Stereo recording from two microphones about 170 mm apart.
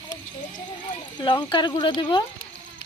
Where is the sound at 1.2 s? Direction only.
30° left (ahead or behind).